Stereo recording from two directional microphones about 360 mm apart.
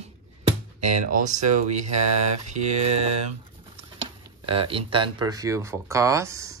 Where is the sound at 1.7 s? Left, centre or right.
Right.